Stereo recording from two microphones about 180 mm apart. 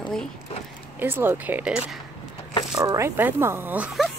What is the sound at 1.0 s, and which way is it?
Speech, 10° right (ahead or behind).